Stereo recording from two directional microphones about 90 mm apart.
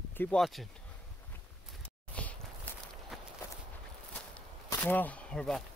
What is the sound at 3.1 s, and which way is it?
Walk, centre (ahead or behind).